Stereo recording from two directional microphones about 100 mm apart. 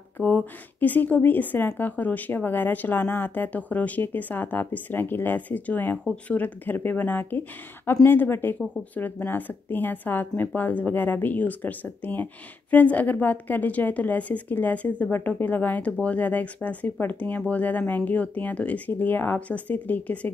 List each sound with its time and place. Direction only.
0.2 s a woman's voice: 15° left (ahead or behind)